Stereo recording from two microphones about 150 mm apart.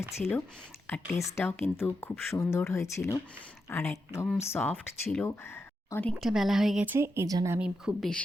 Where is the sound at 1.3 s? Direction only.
15° left (ahead or behind).